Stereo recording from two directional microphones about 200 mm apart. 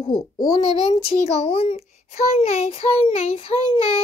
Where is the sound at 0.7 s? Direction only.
30° left (ahead or behind).